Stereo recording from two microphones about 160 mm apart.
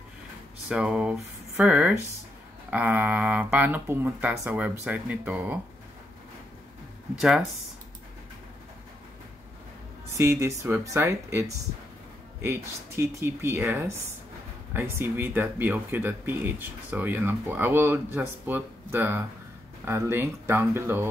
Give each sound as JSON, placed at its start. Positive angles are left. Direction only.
{"t": 0.7, "sound": "speech", "side_deg": -5}
{"t": 7.2, "sound": "speech", "side_deg": -5}
{"t": 10.4, "sound": "speech", "side_deg": -15}